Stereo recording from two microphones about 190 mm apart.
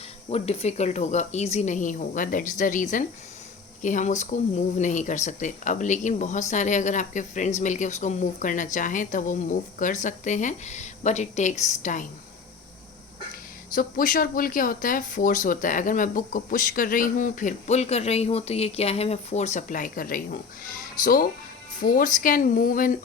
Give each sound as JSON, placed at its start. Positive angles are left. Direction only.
{"t": 0.3, "sound": "speech", "side_deg": 35}
{"t": 13.7, "sound": "speech", "side_deg": 45}